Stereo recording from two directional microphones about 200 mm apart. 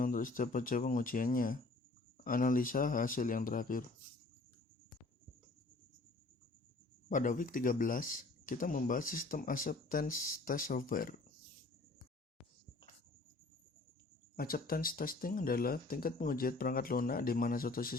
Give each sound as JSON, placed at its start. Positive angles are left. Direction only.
{"t": 0.0, "sound": "speech", "side_deg": 45}
{"t": 7.1, "sound": "speech", "side_deg": 40}
{"t": 14.3, "sound": "speech", "side_deg": 45}